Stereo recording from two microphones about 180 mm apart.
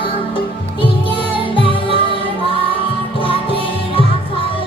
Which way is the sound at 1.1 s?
30° left (ahead or behind).